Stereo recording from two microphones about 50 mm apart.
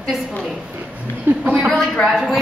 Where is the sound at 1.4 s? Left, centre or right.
Right.